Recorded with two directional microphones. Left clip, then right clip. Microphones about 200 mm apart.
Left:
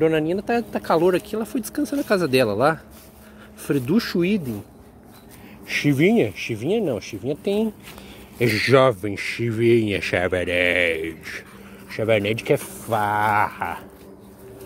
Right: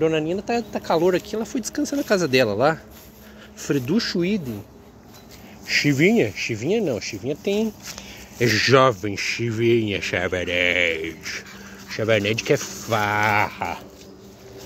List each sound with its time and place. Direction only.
0.0 s speech: 25° left (ahead or behind)
3.9 s speech: 30° left (ahead or behind)
5.7 s speech: 10° left (ahead or behind)
12.9 s a sound: 10° right (ahead or behind)